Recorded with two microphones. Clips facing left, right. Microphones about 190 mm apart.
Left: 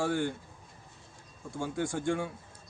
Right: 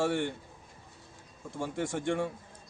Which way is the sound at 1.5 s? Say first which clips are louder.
Even; centre (ahead or behind).